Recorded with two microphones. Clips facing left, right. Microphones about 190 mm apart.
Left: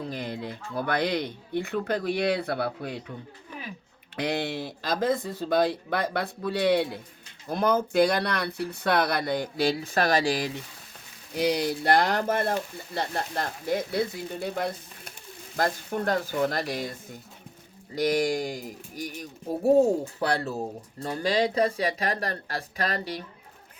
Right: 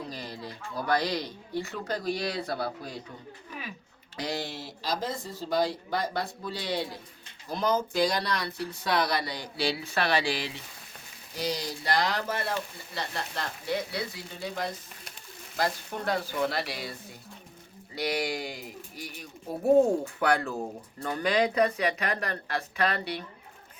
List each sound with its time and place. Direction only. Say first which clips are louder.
0.0 s a sound: left 5 dB; 55° left (ahead or behind)
0.4 s speech: right 3 dB; 55° left (ahead or behind)
4.2 s speech: left 5 dB; 60° left (ahead or behind); by 10.6 s 45° left (ahead or behind)
11.3 s speech: left 7 dB; 60° left (ahead or behind); by 19.3 s 45° left (ahead or behind)
19.5 s speech: left 1 dB; 10° left (ahead or behind)
20.1 s speech: even; 35° left (ahead or behind)